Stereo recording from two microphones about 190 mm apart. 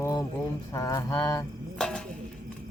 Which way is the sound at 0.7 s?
15° left (ahead or behind).